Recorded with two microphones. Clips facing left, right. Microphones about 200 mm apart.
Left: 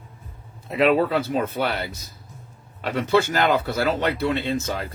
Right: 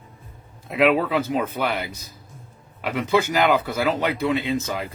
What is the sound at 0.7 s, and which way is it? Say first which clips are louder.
Speech: even; 10° right (ahead or behind).